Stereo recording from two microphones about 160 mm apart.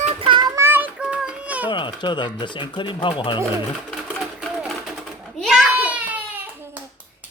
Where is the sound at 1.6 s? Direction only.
30° left (ahead or behind).